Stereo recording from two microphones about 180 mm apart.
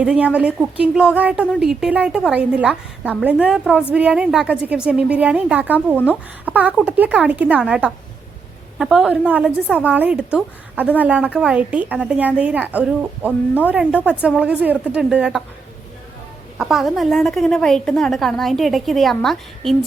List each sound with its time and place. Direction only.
0.0 s a woman's voice: 5° right (ahead or behind)
16.6 s a woman's voice: centre (ahead or behind)